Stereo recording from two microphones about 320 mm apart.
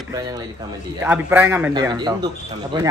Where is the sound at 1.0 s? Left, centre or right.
Centre.